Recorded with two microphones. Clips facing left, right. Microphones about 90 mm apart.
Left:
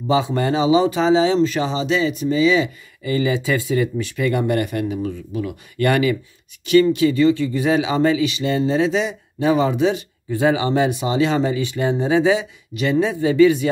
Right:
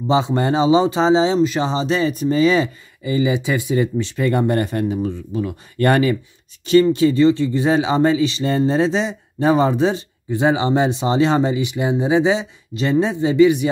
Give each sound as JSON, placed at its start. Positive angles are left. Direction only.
{"t": 0.1, "sound": "speech", "side_deg": -25}
{"t": 1.7, "sound": "speech", "side_deg": -35}
{"t": 3.0, "sound": "speech", "side_deg": -20}
{"t": 10.3, "sound": "speech", "side_deg": -25}